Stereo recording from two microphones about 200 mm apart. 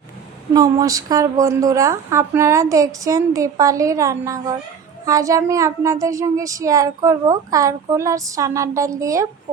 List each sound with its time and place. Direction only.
0.5 s speech: 15° right (ahead or behind)